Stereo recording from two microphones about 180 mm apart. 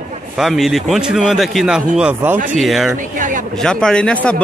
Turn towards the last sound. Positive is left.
turn(degrees=5)  # may be behind; listen again after turning